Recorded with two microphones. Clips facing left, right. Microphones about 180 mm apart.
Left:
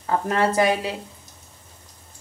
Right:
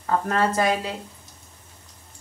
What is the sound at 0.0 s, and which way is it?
Speech, 15° left (ahead or behind).